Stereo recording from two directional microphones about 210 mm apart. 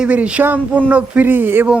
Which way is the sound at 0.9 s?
10° right (ahead or behind).